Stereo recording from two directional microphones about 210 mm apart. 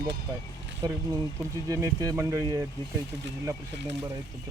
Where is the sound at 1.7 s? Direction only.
15° right (ahead or behind).